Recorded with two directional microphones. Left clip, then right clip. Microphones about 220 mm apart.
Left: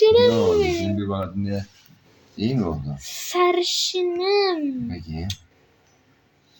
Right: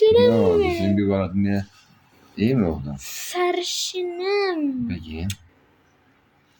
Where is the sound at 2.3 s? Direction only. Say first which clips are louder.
Right 4 dB; 60° right (ahead or behind).